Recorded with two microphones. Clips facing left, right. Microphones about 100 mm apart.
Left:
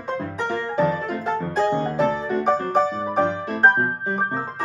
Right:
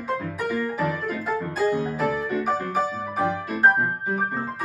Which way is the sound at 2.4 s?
5° right (ahead or behind).